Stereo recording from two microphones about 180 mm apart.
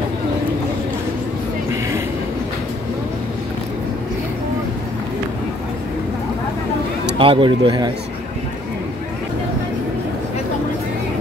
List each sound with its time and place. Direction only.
7.2 s speech: 30° right (ahead or behind)